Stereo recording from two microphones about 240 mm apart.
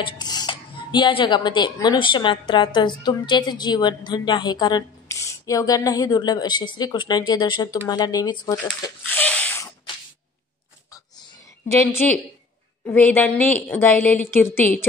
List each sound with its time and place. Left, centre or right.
0.0 s speech: centre
8.8 s a sound: centre
11.9 s speech: centre